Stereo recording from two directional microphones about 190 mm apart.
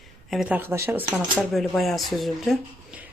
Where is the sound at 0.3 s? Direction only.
5° right (ahead or behind).